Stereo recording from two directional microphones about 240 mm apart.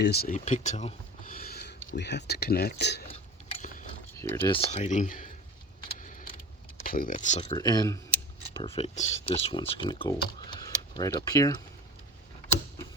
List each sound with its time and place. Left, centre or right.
0.0 s speech: left
3.1 s gears: left
4.1 s a sound: centre
4.4 s speech: left
6.0 s vehicle: left
6.8 s speech: left; by 11.5 s centre